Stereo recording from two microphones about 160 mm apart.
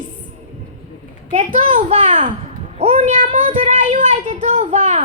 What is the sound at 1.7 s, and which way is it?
Speech, 50° right (ahead or behind).